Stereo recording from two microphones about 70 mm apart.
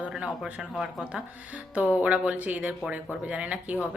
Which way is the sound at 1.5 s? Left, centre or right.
Right.